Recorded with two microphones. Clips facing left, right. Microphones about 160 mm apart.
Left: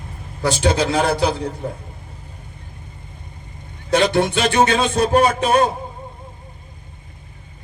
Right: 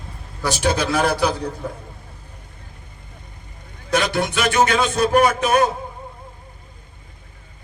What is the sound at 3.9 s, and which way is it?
A man's voice, 25° left (ahead or behind).